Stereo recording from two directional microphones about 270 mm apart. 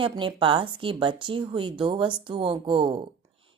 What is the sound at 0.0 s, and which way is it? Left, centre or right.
A woman's voice, centre.